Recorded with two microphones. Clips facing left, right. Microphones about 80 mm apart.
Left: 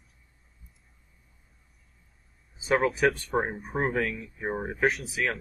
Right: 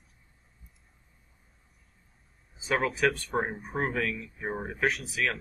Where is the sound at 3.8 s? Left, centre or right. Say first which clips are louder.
Left 2 dB; left.